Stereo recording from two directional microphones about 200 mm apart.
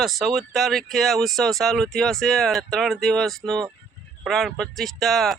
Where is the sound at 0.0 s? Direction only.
Centre (ahead or behind).